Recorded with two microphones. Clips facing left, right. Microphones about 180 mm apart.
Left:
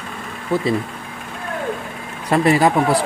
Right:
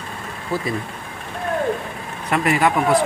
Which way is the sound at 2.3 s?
35° left (ahead or behind).